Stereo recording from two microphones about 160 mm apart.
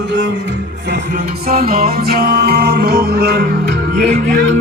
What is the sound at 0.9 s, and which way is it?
Music, 70° right (ahead or behind).